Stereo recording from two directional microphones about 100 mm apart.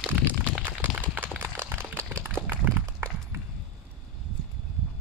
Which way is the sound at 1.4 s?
20° right (ahead or behind).